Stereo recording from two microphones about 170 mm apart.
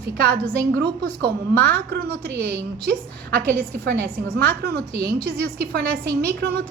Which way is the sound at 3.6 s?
70° right (ahead or behind).